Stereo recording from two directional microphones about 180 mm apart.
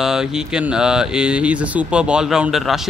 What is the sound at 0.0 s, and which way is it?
Speech, 5° right (ahead or behind).